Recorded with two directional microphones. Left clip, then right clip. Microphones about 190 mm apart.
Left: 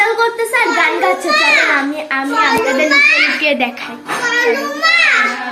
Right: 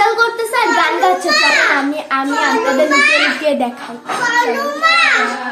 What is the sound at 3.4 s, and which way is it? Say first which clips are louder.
Speech: left 1 dB; 15° right (ahead or behind).